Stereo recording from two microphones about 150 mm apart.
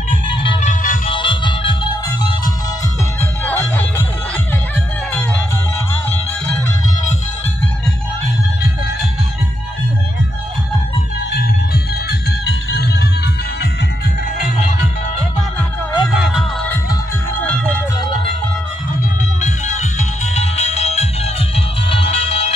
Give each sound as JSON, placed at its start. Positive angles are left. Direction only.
{"t": 0.1, "sound": "music", "side_deg": 35}
{"t": 0.6, "sound": "music", "side_deg": 55}
{"t": 1.0, "sound": "music", "side_deg": 35}
{"t": 3.2, "sound": "music", "side_deg": 15}
{"t": 6.0, "sound": "music", "side_deg": 10}
{"t": 16.1, "sound": "music", "side_deg": -5}
{"t": 17.5, "sound": "music", "side_deg": 10}
{"t": 19.4, "sound": "music", "side_deg": 50}